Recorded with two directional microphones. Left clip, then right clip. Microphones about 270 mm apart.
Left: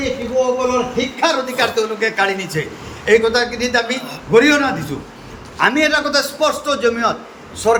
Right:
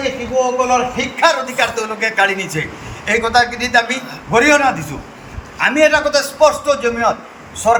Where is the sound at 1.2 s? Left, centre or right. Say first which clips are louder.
Right 3 dB; centre.